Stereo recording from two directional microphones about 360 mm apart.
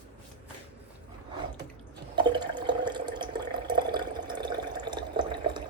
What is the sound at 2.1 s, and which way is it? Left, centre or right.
Water, centre.